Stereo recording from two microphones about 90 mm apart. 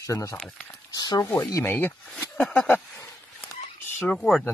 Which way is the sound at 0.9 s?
55° left (ahead or behind).